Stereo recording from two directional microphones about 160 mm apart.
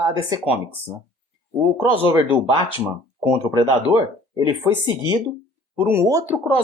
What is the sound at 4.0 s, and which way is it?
Speech, 25° right (ahead or behind).